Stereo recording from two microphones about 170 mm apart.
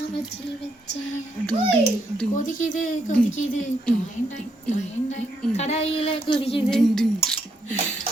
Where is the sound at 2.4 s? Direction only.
50° left (ahead or behind).